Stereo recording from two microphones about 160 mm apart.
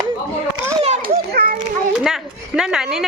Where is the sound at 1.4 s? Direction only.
85° right.